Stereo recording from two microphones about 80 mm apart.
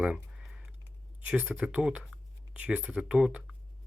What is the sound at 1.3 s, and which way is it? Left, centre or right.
Speech, centre.